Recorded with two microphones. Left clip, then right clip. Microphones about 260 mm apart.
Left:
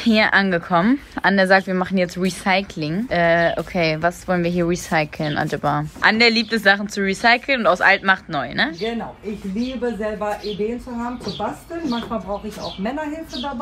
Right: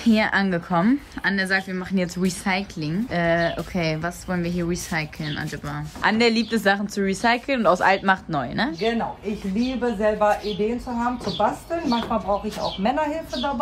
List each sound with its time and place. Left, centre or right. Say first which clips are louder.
0.0 s a woman's voice: left 5 dB; centre
6.0 s speech: left 4 dB; centre
12.8 s speech: right 4 dB; centre